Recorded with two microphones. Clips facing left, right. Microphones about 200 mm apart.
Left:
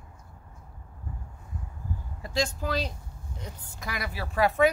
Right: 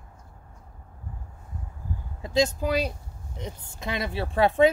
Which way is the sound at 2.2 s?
20° right (ahead or behind).